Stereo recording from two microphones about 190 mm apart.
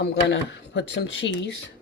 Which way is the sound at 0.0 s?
60° left (ahead or behind).